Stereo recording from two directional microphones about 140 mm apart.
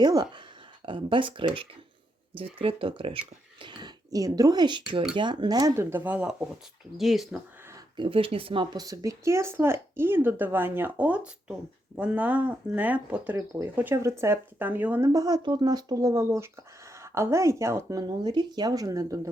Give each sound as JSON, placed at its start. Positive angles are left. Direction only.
{"t": 0.0, "sound": "speech", "side_deg": -30}
{"t": 7.9, "sound": "speech", "side_deg": -40}
{"t": 13.3, "sound": "speech", "side_deg": -25}
{"t": 15.1, "sound": "speech", "side_deg": -30}